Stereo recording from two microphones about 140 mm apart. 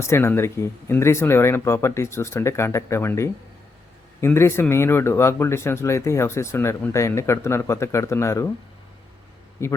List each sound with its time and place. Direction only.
0.0 s speech: 15° left (ahead or behind)
9.6 s speech: 20° left (ahead or behind)